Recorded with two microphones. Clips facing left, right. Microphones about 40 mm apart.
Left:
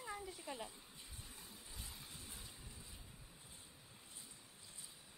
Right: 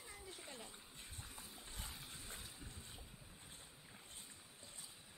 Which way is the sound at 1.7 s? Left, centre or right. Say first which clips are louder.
Right 2 dB; right.